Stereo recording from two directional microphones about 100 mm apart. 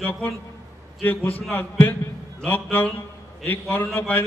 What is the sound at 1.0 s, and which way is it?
A man's voice, 15° left (ahead or behind).